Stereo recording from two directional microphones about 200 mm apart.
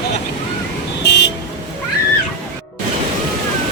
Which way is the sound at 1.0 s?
55° left (ahead or behind).